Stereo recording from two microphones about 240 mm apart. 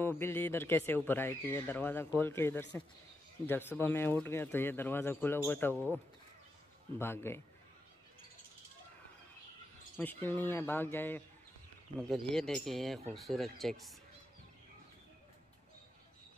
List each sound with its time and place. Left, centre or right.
0.0 s speech: centre
7.0 s speech: centre
9.9 s speech: centre